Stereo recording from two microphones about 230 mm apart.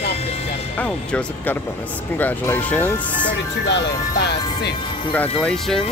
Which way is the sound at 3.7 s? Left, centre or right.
Left.